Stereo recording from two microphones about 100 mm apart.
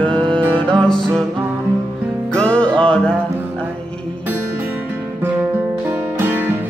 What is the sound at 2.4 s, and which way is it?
Music, 10° left (ahead or behind).